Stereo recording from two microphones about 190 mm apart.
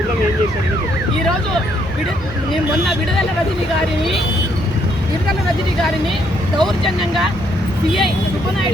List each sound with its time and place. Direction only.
6.6 s speech: centre (ahead or behind)